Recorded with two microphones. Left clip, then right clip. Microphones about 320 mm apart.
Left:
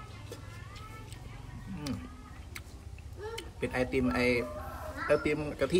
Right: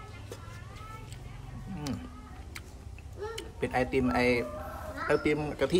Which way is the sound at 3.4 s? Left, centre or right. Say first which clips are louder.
Right 3 dB; centre.